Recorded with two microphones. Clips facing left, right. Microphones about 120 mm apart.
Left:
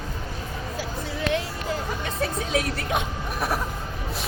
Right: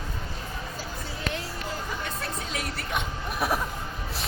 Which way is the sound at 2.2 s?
90° left.